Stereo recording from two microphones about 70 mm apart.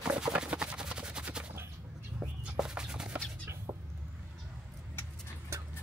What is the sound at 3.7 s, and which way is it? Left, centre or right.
Vehicle, right.